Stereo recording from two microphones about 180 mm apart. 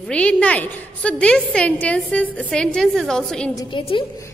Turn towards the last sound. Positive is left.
turn(degrees=30)  # may be behind; listen again after turning